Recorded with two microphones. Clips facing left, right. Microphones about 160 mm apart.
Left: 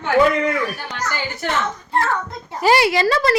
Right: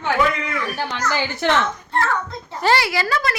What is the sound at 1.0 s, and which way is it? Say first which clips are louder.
Speech: right 4 dB; 90° right.